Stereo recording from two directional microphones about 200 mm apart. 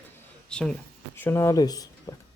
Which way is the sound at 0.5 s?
5° left (ahead or behind).